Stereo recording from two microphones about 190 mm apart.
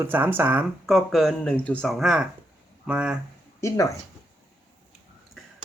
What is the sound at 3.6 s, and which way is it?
Speech, 15° left (ahead or behind).